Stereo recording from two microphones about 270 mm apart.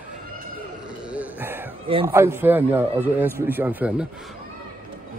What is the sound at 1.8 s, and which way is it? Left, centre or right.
Speech, centre.